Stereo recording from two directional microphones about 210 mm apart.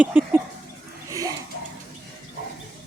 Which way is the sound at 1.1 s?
15° right (ahead or behind).